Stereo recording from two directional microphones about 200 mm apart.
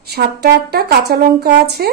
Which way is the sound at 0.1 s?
55° right (ahead or behind).